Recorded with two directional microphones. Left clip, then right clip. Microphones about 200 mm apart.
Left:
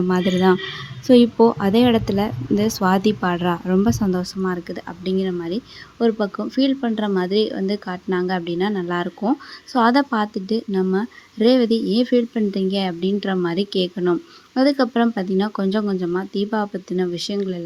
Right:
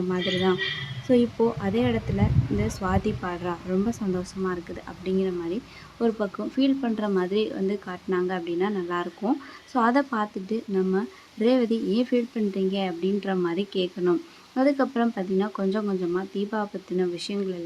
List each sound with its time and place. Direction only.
0.1 s a woman's voice: 35° left (ahead or behind)